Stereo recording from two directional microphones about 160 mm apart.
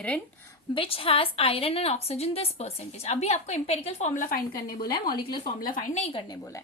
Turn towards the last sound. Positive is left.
turn(degrees=20)  # may be behind; listen again after turning